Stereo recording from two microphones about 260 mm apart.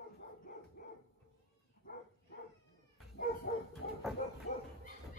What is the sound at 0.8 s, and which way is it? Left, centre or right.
Dog, left.